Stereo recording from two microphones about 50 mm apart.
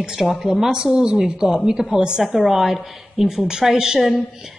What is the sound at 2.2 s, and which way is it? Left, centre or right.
A woman's voice, centre.